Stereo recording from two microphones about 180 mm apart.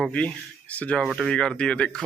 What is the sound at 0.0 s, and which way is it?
Speech, 5° left (ahead or behind).